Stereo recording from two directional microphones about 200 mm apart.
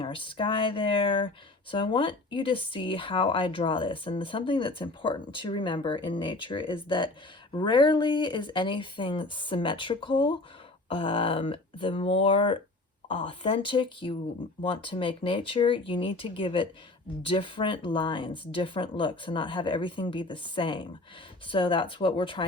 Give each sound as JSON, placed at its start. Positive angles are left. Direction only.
{"t": 0.0, "sound": "speech", "side_deg": 25}